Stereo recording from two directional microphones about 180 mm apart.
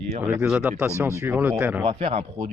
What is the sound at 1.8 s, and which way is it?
Speech, 30° right (ahead or behind).